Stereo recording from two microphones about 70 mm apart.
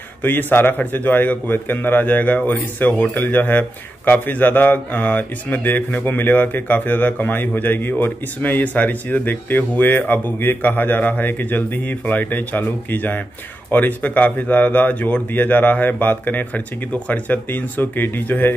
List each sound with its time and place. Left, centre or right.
0.2 s speech: left